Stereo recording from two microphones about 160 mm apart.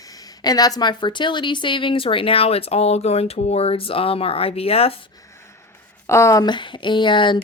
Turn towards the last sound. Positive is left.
turn(degrees=30)  # may be behind; listen again after turning